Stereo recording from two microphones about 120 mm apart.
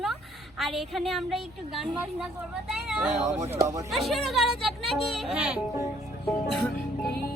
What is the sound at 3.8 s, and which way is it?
A woman's voice, centre (ahead or behind).